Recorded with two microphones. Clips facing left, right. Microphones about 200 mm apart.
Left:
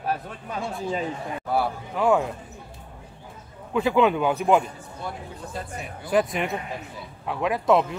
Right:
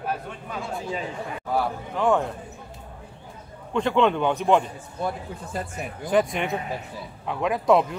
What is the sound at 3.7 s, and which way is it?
Speech, 5° left (ahead or behind).